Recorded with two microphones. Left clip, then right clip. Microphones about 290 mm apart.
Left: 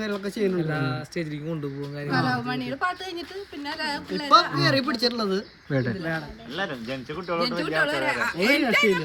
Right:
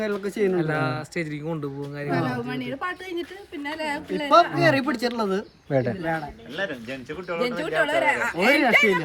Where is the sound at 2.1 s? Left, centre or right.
Centre.